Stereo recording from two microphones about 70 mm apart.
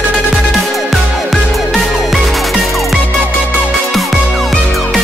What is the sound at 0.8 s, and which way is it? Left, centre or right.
Music, centre.